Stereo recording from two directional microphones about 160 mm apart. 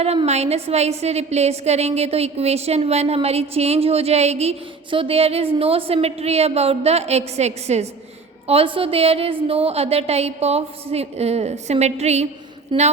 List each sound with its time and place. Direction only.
0.0 s a woman's voice: 40° right (ahead or behind)
12.7 s a woman's voice: 30° right (ahead or behind)